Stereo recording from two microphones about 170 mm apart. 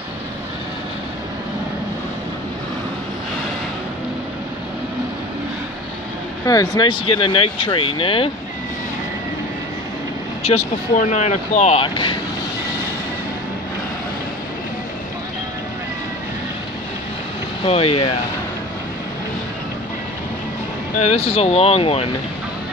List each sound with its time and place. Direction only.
6.4 s speech: 20° left (ahead or behind)
10.4 s speech: 40° left (ahead or behind)
17.6 s speech: 35° left (ahead or behind)
21.0 s speech: 40° left (ahead or behind)